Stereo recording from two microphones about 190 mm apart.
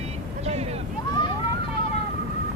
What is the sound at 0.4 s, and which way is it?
Vehicle, 35° right (ahead or behind).